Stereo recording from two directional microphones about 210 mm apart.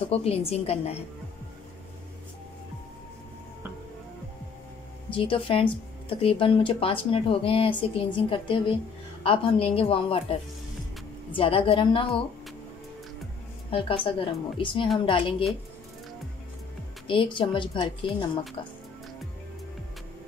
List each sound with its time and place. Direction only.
0.1 s speech: 30° left (ahead or behind)
5.1 s speech: 25° left (ahead or behind)
11.3 s speech: 25° left (ahead or behind)
13.7 s speech: 25° left (ahead or behind)
17.1 s speech: 25° left (ahead or behind)